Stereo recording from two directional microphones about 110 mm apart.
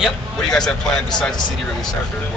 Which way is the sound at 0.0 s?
5° left (ahead or behind).